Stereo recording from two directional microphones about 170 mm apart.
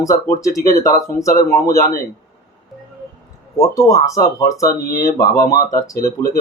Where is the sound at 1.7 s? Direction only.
55° left (ahead or behind).